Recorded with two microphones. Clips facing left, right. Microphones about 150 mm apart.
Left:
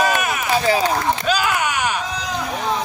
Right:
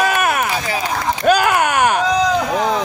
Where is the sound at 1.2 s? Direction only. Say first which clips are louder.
Right 6 dB; 55° right (ahead or behind).